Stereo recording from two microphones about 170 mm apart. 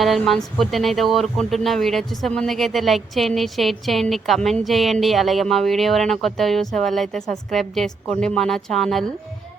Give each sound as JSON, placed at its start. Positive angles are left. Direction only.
{"t": 0.0, "sound": "speech", "side_deg": 0}